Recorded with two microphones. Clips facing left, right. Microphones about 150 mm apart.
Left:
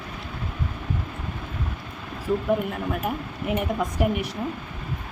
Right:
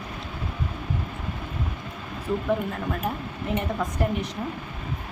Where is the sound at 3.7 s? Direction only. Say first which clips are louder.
Left 2 dB; 10° left (ahead or behind).